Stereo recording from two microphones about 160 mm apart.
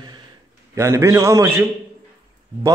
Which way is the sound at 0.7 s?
20° right (ahead or behind).